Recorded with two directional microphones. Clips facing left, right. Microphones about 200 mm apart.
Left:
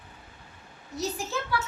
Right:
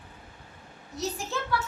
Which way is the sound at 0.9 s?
Centre (ahead or behind).